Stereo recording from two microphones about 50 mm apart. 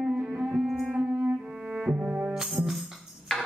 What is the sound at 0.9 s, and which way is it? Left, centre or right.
Music, right.